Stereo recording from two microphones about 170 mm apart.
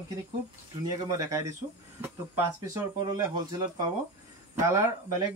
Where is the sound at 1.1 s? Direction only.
20° right (ahead or behind).